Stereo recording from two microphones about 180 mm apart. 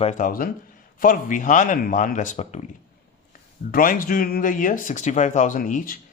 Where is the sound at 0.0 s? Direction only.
45° left (ahead or behind).